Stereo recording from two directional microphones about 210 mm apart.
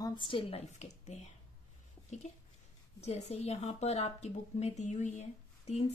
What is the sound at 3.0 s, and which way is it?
Speech, 30° left (ahead or behind).